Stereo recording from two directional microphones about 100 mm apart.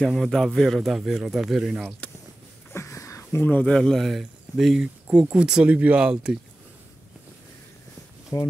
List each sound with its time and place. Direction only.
0.0 s speech: centre (ahead or behind)
2.7 s a sound: 30° left (ahead or behind)
3.3 s speech: 20° left (ahead or behind); by 6.3 s 10° right (ahead or behind)
8.3 s speech: 40° left (ahead or behind)